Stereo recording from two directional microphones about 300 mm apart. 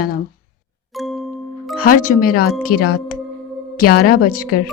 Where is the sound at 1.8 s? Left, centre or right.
Left.